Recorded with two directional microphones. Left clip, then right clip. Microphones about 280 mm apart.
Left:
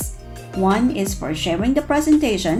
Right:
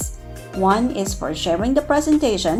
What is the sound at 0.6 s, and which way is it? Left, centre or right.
A woman's voice, right.